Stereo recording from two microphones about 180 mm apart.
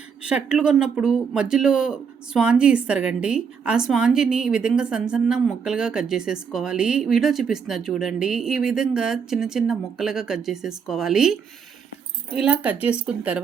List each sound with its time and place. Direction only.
0.2 s speech: 5° right (ahead or behind)